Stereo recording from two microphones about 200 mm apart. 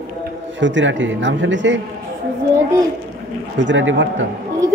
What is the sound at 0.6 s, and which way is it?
A man's voice, 65° right (ahead or behind).